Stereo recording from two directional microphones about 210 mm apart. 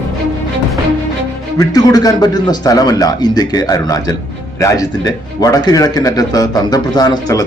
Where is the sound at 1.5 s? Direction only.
20° left (ahead or behind).